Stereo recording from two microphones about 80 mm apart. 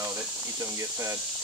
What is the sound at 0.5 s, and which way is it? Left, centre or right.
Speech, right.